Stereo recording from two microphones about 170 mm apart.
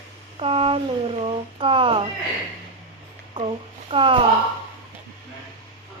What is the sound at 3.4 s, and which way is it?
Speech, 30° right (ahead or behind).